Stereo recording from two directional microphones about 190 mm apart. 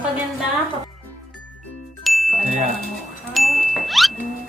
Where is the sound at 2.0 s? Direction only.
Centre (ahead or behind).